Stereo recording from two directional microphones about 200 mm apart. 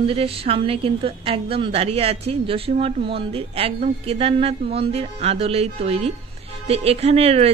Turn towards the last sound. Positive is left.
turn(degrees=-30)  # may be behind; listen again after turning